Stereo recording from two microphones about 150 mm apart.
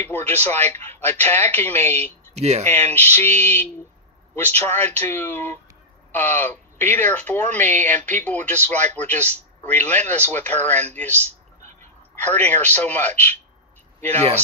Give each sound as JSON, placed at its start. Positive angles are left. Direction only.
{"t": 0.0, "sound": "speech", "side_deg": 15}
{"t": 2.3, "sound": "speech", "side_deg": -45}
{"t": 2.6, "sound": "speech", "side_deg": 15}
{"t": 12.2, "sound": "speech", "side_deg": 10}